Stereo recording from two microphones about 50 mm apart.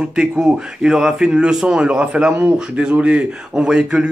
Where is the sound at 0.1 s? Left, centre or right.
Centre.